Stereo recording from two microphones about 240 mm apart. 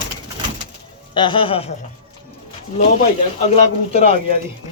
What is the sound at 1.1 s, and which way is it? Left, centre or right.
Speech, centre.